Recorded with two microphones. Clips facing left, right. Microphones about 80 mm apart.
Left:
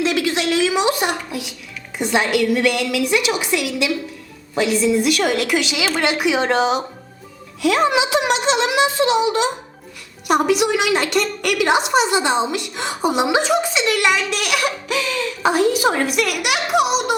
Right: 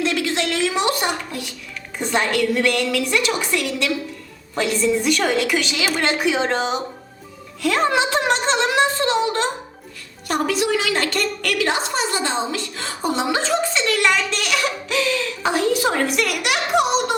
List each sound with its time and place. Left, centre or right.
0.3 s a sound: centre
2.0 s a woman's voice: centre
6.6 s speech: left
7.6 s a woman's voice: centre